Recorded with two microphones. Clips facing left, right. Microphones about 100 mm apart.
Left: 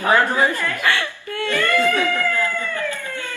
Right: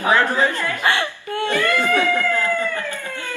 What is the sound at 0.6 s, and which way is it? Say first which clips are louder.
Laughter: right 1 dB; 20° right (ahead or behind).